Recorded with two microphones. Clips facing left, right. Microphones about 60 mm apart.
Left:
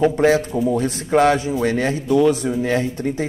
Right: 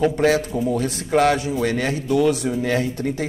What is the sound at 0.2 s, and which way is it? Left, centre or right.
Speech, left.